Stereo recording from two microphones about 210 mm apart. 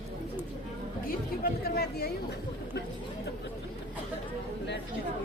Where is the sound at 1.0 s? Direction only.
45° left (ahead or behind).